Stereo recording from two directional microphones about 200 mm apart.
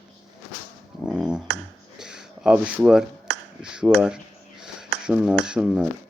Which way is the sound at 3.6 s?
5° right (ahead or behind).